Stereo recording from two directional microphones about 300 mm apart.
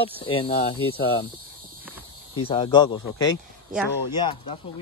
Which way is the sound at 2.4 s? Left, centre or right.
Centre.